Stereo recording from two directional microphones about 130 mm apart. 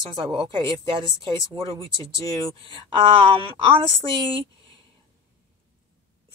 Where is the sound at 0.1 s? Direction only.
40° right (ahead or behind).